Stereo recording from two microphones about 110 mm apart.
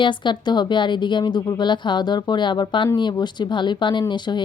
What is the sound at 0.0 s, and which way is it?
Speech, 40° left (ahead or behind).